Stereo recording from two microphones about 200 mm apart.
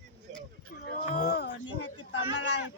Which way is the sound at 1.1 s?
50° left (ahead or behind).